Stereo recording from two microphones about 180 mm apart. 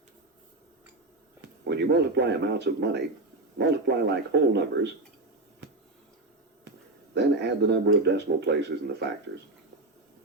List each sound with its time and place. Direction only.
1.4 s a man's voice: 70° right (ahead or behind)
7.1 s speech: 70° right (ahead or behind)